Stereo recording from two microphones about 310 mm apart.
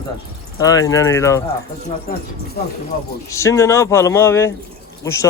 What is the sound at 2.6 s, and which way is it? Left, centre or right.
Speech, left.